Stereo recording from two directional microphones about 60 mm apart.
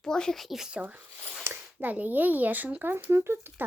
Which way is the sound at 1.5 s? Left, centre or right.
Right.